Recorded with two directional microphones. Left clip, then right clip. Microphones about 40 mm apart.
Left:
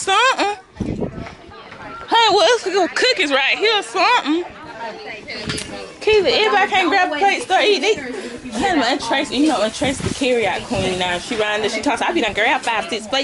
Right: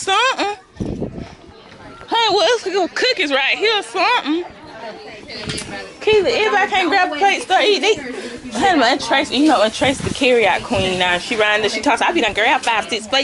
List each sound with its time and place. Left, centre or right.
0.0 s a sound: centre
2.0 s speech: centre
4.8 s chatter: left
6.3 s a woman's voice: centre
8.6 s speech: right